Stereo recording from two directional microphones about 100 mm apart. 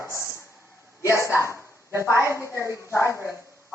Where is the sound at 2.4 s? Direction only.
30° left (ahead or behind).